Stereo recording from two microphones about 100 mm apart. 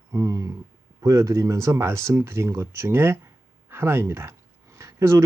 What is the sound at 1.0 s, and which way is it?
Speech, 40° right (ahead or behind).